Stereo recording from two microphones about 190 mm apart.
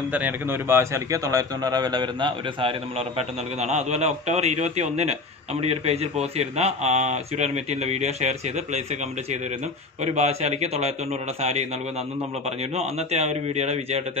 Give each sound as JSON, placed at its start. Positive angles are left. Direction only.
{"t": 0.1, "sound": "a man's voice", "side_deg": -10}
{"t": 10.0, "sound": "speech", "side_deg": -35}
{"t": 12.7, "sound": "speech", "side_deg": -35}